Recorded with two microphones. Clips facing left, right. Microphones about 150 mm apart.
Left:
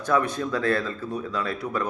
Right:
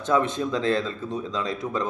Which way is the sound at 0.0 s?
20° right (ahead or behind).